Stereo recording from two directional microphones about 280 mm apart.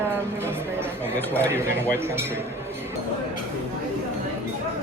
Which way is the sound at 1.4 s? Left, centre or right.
Centre.